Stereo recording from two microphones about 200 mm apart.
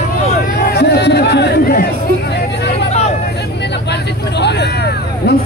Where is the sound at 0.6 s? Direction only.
55° left (ahead or behind).